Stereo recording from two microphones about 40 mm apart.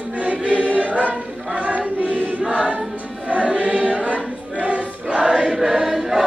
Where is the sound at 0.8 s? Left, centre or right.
Right.